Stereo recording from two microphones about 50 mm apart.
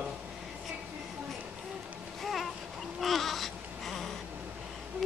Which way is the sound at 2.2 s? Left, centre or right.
Centre.